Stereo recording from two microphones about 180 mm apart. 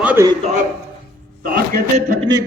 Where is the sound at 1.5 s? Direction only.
55° right (ahead or behind).